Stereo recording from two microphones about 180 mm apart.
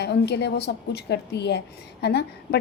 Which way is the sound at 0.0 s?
70° left (ahead or behind).